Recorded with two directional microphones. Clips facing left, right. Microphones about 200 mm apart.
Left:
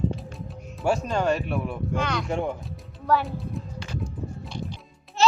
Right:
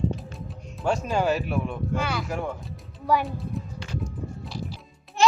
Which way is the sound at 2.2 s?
25° left (ahead or behind).